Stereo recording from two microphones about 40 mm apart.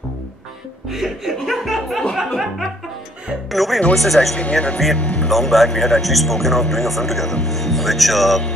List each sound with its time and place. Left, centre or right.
0.8 s speech: centre
3.4 s a man's voice: centre
4.4 s speech: left
5.3 s a man's voice: centre